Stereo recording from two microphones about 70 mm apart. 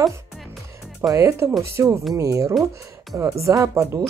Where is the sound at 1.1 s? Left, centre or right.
Right.